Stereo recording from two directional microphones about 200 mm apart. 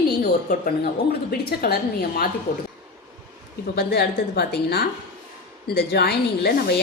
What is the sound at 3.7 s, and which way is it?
A woman's voice, 55° left (ahead or behind).